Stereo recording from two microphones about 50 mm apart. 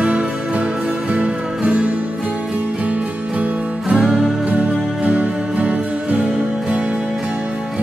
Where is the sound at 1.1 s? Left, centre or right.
Right.